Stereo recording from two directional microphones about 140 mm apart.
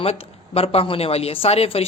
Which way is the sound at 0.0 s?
45° left (ahead or behind).